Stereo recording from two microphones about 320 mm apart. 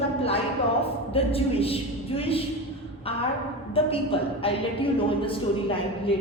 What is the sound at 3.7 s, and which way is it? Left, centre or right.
A woman's voice, centre.